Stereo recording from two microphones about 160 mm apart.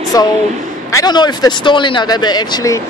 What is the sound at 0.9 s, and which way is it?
Speech, 25° left (ahead or behind).